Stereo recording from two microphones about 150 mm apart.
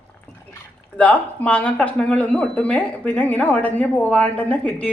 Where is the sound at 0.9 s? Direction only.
10° left (ahead or behind).